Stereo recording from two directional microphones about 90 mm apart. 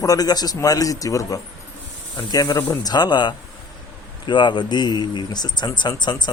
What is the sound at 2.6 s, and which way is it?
Speech, 35° left (ahead or behind).